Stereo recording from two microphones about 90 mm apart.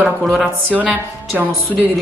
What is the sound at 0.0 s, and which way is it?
Speech, 5° right (ahead or behind).